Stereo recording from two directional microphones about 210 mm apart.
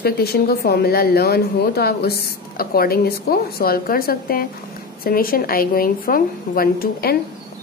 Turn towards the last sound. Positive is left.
turn(degrees=45)  # may be behind; listen again after turning